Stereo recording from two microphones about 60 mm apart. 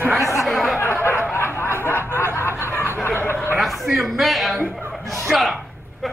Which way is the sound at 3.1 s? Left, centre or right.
Left.